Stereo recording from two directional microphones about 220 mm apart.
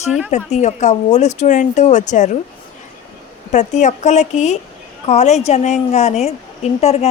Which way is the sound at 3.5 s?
35° left (ahead or behind).